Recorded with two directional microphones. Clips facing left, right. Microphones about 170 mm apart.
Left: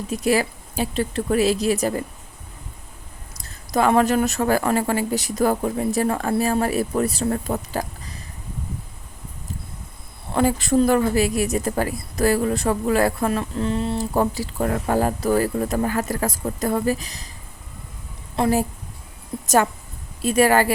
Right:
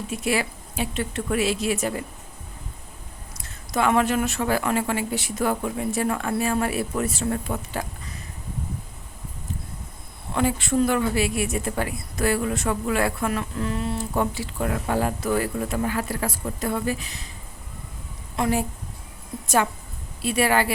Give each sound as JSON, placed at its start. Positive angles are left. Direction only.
{"t": 0.1, "sound": "a woman's voice", "side_deg": 40}
{"t": 3.3, "sound": "a woman's voice", "side_deg": 35}
{"t": 10.3, "sound": "a woman's voice", "side_deg": 40}
{"t": 18.3, "sound": "a woman's voice", "side_deg": 30}
{"t": 20.2, "sound": "speech", "side_deg": 45}